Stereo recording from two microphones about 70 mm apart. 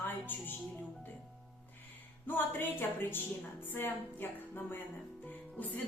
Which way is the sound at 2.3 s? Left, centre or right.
Left.